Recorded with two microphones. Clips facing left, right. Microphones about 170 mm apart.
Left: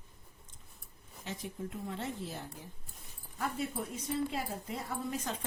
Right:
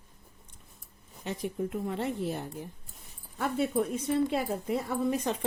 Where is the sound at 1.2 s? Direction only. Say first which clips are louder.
Right 8 dB; 60° right (ahead or behind).